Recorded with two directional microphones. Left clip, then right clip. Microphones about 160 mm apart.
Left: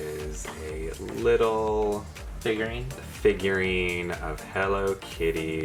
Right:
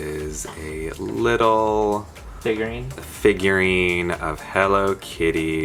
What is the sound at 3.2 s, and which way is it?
Speech, 30° right (ahead or behind).